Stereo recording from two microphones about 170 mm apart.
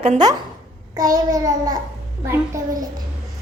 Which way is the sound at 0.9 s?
20° right (ahead or behind).